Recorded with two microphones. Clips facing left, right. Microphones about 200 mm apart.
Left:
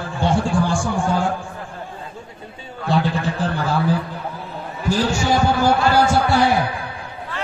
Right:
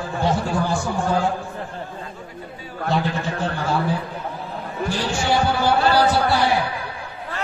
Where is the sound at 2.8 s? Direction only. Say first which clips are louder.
Left 3 dB; 30° left (ahead or behind).